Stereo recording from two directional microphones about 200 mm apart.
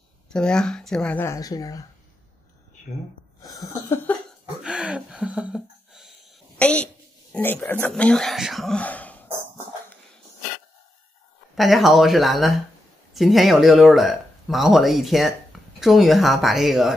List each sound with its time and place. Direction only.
0.3 s speech: 5° left (ahead or behind)
3.4 s speech: 20° left (ahead or behind)
4.6 s a sound: 5° right (ahead or behind)
6.6 s speech: 5° left (ahead or behind)
11.5 s speech: centre (ahead or behind)